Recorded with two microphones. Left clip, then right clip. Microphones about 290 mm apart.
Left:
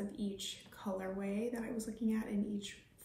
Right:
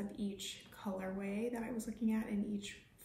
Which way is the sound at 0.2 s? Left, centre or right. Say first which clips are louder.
Even; centre.